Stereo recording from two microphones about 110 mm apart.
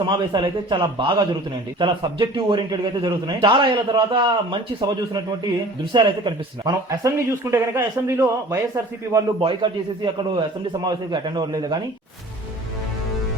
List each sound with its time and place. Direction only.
0.0 s a man's voice: 45° right (ahead or behind)
5.9 s a man's voice: 45° right (ahead or behind)
7.0 s a man's voice: 25° right (ahead or behind)
9.4 s a man's voice: 50° right (ahead or behind)